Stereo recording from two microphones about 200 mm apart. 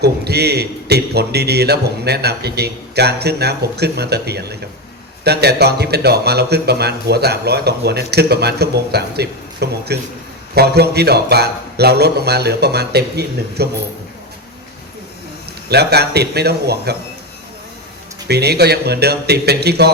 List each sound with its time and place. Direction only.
0.0 s a man's voice: 55° right (ahead or behind)
15.7 s a man's voice: 55° right (ahead or behind)
18.3 s a man's voice: 55° right (ahead or behind)